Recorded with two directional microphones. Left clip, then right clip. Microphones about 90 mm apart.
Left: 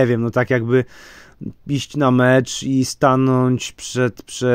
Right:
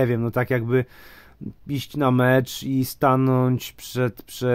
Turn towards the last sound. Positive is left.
turn(degrees=40)  # may be behind; listen again after turning